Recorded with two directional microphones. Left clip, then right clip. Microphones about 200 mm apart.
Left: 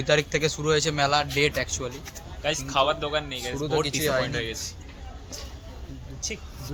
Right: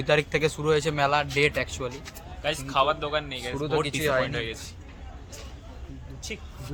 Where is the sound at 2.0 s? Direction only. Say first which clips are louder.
Left 2 dB; 15° left (ahead or behind).